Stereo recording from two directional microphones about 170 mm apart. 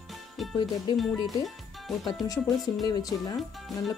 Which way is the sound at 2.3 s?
20° left (ahead or behind).